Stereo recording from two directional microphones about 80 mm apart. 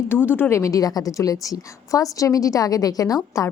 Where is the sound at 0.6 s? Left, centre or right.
Left.